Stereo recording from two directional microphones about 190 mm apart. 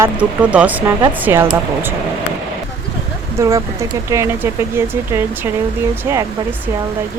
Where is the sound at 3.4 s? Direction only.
15° right (ahead or behind).